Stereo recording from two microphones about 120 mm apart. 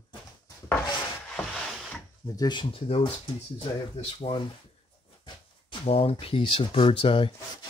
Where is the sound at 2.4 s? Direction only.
40° left (ahead or behind).